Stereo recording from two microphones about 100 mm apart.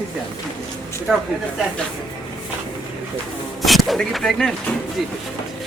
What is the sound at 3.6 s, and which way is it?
Speech, centre (ahead or behind).